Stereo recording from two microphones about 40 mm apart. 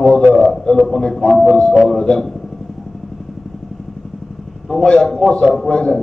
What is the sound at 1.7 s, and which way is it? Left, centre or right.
Speech, centre.